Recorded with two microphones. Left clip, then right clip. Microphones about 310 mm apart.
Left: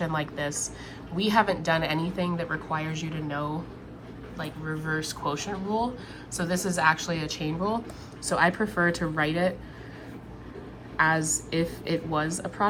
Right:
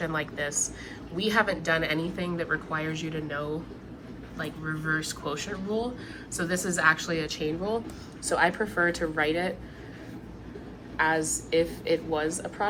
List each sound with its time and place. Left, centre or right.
0.0 s a woman's voice: centre
10.9 s a woman's voice: centre